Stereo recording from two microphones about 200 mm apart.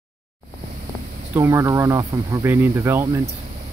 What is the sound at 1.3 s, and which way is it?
Speech, 15° right (ahead or behind).